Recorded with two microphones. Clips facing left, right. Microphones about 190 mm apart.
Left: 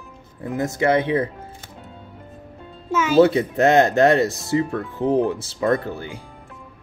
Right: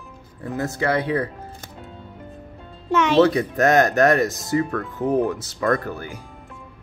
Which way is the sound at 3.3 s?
25° left (ahead or behind).